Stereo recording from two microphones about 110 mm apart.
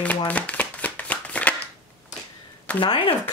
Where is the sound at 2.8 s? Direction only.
50° left (ahead or behind).